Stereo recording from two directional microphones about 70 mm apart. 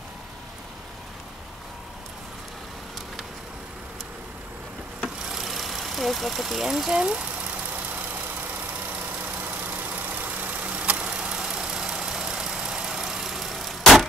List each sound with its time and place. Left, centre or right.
5.2 s vehicle: centre
7.7 s vehicle: right; by 14.0 s centre